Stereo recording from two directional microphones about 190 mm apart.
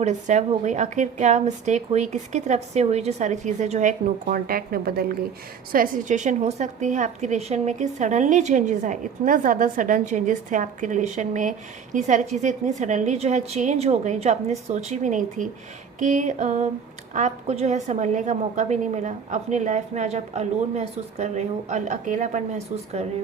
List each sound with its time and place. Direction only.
0.0 s a woman's voice: 40° right (ahead or behind)